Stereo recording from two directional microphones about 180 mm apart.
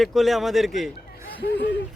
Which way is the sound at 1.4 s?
70° left (ahead or behind).